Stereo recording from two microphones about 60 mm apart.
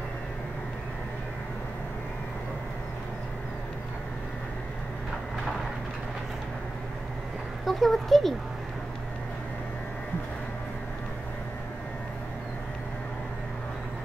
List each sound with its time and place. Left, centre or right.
7.6 s speech: centre